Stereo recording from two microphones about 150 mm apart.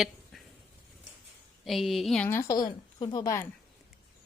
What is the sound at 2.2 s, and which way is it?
A woman's voice, 15° left (ahead or behind).